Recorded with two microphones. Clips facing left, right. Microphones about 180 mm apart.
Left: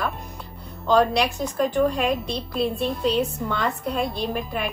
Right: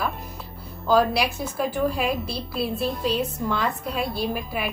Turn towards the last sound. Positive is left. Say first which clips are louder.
# left 1 dB
turn(degrees=-5)  # may be behind; listen again after turning